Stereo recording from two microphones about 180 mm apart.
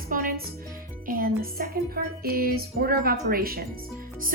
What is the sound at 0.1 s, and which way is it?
Music, 50° right (ahead or behind).